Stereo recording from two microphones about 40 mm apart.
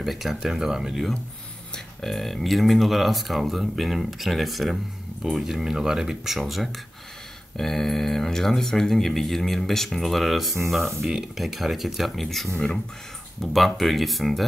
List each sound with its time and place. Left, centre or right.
0.0 s speech: centre
2.0 s speech: centre
7.5 s speech: centre
12.5 s speech: centre
13.4 s speech: centre